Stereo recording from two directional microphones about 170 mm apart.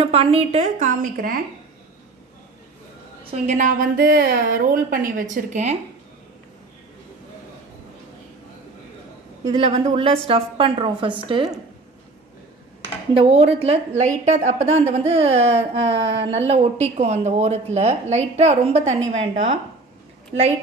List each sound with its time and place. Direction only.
0.0 s a woman's voice: 35° right (ahead or behind); by 1.4 s 55° right (ahead or behind)
3.3 s a woman's voice: 45° right (ahead or behind)
9.6 s a woman's voice: 40° right (ahead or behind)
13.1 s a woman's voice: 35° right (ahead or behind)